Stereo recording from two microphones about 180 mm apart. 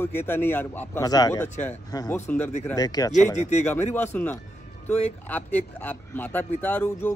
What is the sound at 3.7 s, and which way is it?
A man's voice, 10° left (ahead or behind).